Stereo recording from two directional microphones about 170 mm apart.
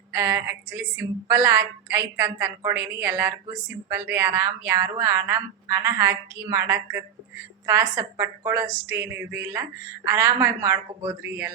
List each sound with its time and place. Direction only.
0.1 s speech: 15° right (ahead or behind)